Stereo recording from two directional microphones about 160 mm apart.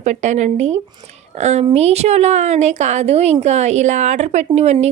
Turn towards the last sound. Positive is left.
turn(degrees=-40)  # may be behind; listen again after turning